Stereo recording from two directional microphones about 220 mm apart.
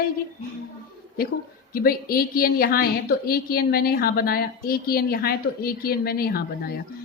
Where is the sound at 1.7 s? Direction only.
40° left (ahead or behind).